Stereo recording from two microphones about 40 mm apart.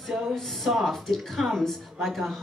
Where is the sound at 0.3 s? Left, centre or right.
Centre.